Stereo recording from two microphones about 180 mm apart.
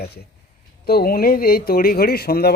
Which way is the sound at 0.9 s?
55° left (ahead or behind).